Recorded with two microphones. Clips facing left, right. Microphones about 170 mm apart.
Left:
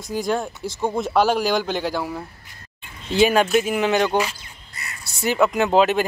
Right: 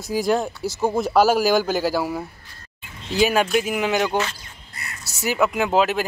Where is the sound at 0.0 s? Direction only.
5° right (ahead or behind).